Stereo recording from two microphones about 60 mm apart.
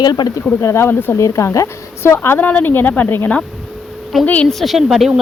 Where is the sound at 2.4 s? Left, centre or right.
Left.